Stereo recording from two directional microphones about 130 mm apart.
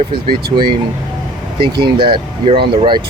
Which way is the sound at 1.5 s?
40° right (ahead or behind).